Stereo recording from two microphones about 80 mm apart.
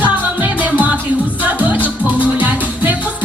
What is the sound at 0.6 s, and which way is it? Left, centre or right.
Music, centre.